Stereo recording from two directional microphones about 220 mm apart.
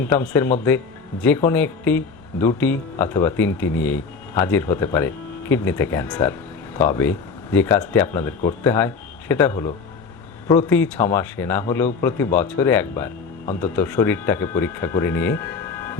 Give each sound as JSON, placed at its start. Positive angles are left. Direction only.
{"t": 0.0, "sound": "speech", "side_deg": 10}